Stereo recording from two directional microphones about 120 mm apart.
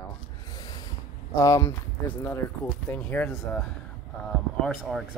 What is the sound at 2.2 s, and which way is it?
Speech, 15° left (ahead or behind).